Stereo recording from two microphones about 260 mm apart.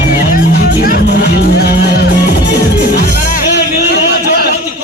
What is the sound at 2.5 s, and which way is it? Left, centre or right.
Music, left.